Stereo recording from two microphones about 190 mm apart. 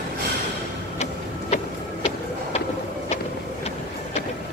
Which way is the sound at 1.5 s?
40° left (ahead or behind).